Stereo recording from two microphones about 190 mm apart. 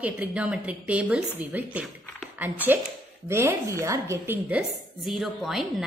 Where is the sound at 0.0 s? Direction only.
5° right (ahead or behind).